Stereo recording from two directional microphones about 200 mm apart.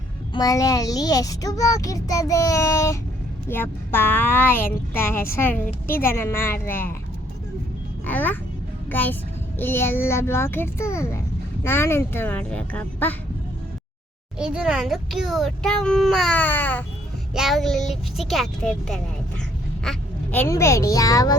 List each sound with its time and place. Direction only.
0.3 s a child's voice: 15° left (ahead or behind)
8.0 s a child's voice: 10° left (ahead or behind)
14.3 s a child's voice: 5° right (ahead or behind); by 21.3 s 15° left (ahead or behind)